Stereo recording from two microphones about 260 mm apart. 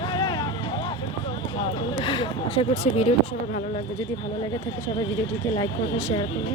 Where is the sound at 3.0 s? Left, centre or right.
Left.